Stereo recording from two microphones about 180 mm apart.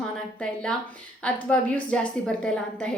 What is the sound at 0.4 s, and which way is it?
A woman's voice, 5° left (ahead or behind).